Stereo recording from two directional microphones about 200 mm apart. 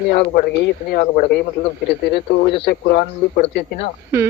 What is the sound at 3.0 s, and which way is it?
Speech, 30° left (ahead or behind).